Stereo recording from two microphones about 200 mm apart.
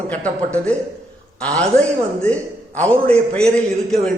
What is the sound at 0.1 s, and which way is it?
A man's voice, 5° left (ahead or behind).